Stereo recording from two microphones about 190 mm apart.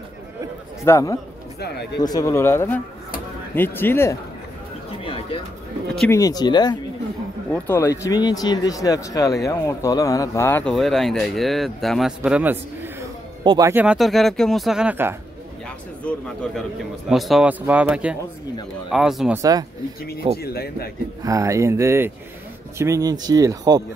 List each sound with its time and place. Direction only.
0.8 s speech: 15° left (ahead or behind)
1.6 s a sound: 60° left (ahead or behind)
2.0 s speech: 20° left (ahead or behind)
5.0 s a sound: 30° left (ahead or behind)
5.9 s speech: 15° left (ahead or behind)
7.5 s a man's voice: 10° left (ahead or behind); by 12.9 s 10° right (ahead or behind)
13.4 s speech: 20° right (ahead or behind)
16.0 s speech: 5° left (ahead or behind)
19.3 s speech: 20° right (ahead or behind)
20.0 s speech: 55° left (ahead or behind)
21.2 s speech: 15° right (ahead or behind)